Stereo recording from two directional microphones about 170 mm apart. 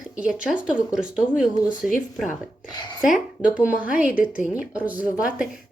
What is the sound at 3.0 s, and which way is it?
A woman's voice, 5° right (ahead or behind).